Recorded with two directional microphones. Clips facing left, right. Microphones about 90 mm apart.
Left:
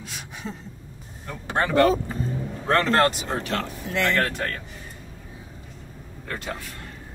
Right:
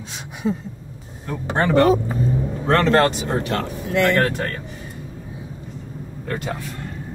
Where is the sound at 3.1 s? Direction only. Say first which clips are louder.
Right 3 dB; centre (ahead or behind).